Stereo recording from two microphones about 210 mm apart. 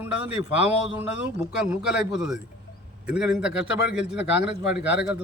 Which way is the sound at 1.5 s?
5° right (ahead or behind).